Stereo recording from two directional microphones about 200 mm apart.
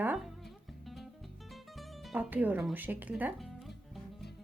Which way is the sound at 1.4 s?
Centre (ahead or behind).